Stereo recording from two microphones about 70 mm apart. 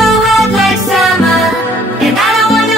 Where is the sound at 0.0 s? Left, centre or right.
Centre.